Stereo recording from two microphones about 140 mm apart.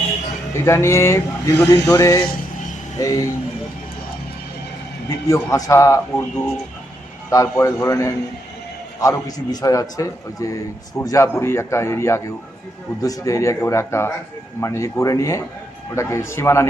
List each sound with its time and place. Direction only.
0.5 s speech: 20° left (ahead or behind)
5.0 s speech: 25° left (ahead or behind)
7.3 s speech: 20° left (ahead or behind)